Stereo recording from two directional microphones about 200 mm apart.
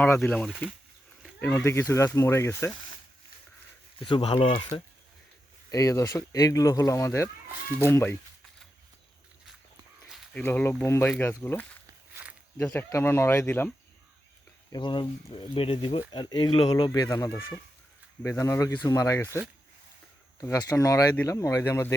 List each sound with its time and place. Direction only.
0.0 s speech: 5° left (ahead or behind)
4.0 s speech: 25° left (ahead or behind)
5.7 s speech: 15° left (ahead or behind)
10.1 s a sound: centre (ahead or behind)
10.4 s speech: 10° left (ahead or behind)
14.7 s speech: 25° left (ahead or behind)